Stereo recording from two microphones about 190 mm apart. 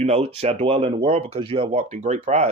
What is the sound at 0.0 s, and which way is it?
Speech, 35° right (ahead or behind).